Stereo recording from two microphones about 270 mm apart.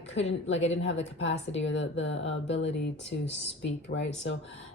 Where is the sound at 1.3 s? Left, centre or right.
Left.